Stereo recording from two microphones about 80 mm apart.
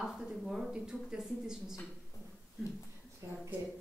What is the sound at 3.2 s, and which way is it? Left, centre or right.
Speech, right.